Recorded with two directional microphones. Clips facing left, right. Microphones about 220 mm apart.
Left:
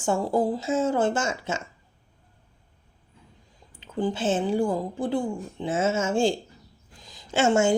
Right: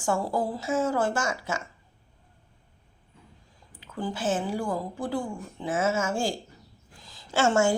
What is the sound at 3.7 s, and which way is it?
A woman's voice, 25° left (ahead or behind).